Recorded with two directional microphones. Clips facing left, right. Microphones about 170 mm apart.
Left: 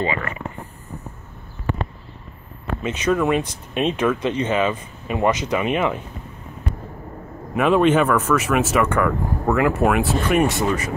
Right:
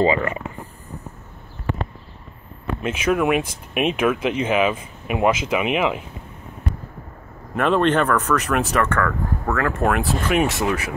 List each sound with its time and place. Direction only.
0.0 s speech: 30° right (ahead or behind)
2.9 s speech: 10° right (ahead or behind)
7.5 s speech: 5° left (ahead or behind)